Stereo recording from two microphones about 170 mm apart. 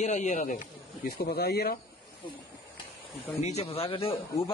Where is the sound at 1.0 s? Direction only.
65° left (ahead or behind).